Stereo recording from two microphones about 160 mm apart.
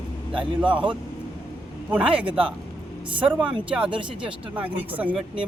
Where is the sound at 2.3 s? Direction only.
35° right (ahead or behind).